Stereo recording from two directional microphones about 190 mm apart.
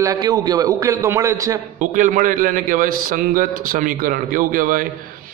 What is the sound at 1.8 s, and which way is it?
A man's voice, 45° right (ahead or behind).